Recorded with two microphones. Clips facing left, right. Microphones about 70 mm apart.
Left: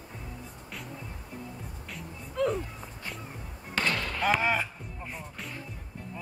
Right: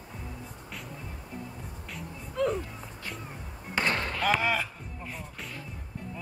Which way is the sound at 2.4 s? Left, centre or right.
Centre.